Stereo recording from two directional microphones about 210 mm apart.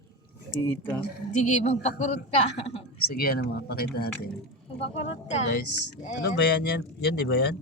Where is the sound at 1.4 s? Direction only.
35° left (ahead or behind).